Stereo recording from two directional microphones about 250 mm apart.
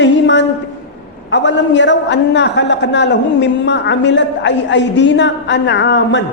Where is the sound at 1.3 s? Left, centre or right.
Left.